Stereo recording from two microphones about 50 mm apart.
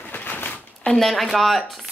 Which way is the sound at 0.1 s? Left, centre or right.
Left.